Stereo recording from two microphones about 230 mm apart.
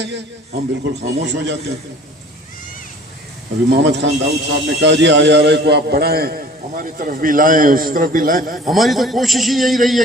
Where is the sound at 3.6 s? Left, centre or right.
Right.